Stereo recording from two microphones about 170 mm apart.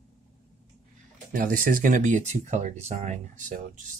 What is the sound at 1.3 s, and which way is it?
Speech, 55° right (ahead or behind).